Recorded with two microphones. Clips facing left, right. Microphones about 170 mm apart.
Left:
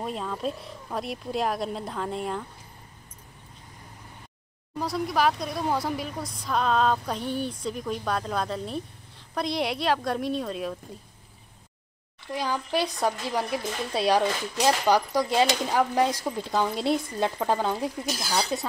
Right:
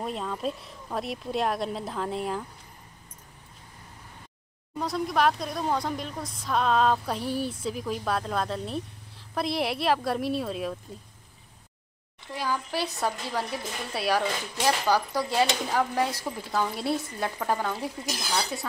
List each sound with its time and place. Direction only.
0.0 s speech: centre (ahead or behind)
4.7 s speech: centre (ahead or behind)
12.3 s speech: 20° left (ahead or behind)